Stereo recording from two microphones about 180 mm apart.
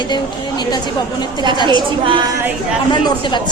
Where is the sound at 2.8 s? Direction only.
25° left (ahead or behind).